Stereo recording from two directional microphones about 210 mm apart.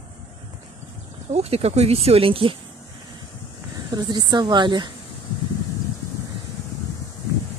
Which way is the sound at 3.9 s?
20° right (ahead or behind).